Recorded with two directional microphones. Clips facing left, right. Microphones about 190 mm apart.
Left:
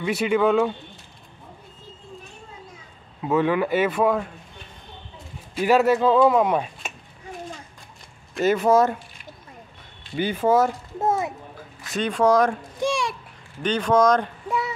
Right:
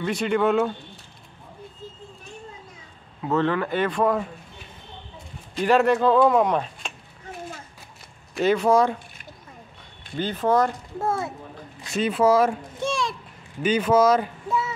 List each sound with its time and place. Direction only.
0.0 s speech: 5° left (ahead or behind)
3.2 s speech: 10° left (ahead or behind)
5.5 s speech: 5° left (ahead or behind)
8.4 s speech: 5° left (ahead or behind)
10.1 s speech: 10° left (ahead or behind)
11.0 s a child's voice: 20° left (ahead or behind)
11.9 s speech: 5° right (ahead or behind)
12.8 s a child's voice: 10° left (ahead or behind)
13.6 s speech: 5° right (ahead or behind)